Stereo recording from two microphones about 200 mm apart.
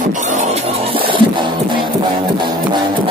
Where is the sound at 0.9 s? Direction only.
25° right (ahead or behind).